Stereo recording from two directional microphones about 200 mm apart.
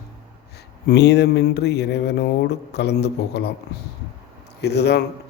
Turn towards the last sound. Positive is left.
turn(degrees=55)  # may be behind; listen again after turning